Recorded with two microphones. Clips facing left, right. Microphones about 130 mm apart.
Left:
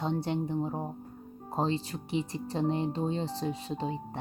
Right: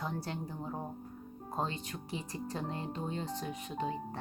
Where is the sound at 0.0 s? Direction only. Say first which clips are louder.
Left 8 dB; 25° left (ahead or behind).